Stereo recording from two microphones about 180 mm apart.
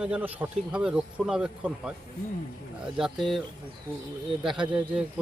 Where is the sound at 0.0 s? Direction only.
10° right (ahead or behind).